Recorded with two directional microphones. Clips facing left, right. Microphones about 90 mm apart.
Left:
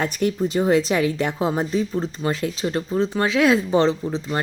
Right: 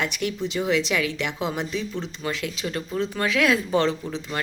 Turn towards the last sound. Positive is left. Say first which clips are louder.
# left 5 dB
turn(degrees=30)  # may be behind; listen again after turning